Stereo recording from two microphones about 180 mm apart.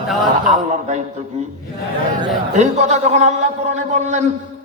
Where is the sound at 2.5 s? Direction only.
40° right (ahead or behind).